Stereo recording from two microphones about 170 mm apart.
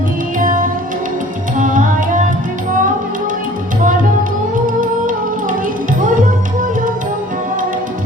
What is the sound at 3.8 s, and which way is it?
Music, 50° right (ahead or behind).